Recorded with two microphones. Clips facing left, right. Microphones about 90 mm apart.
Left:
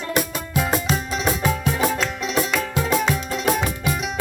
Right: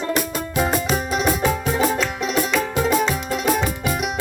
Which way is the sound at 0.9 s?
10° right (ahead or behind).